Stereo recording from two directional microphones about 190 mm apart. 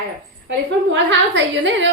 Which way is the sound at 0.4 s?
70° right (ahead or behind).